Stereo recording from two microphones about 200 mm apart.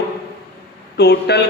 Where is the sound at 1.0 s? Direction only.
55° left (ahead or behind).